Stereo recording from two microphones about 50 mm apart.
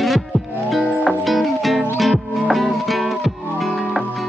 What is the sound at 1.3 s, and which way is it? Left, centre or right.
Music, centre.